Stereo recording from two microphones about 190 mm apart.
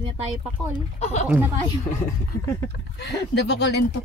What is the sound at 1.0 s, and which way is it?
Speech, 35° left (ahead or behind).